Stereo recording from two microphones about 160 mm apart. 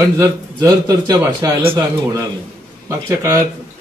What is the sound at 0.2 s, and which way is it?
Speech, 25° right (ahead or behind).